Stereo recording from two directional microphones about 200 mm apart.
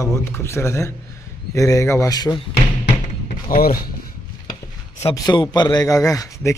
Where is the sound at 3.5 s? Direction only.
45° left (ahead or behind).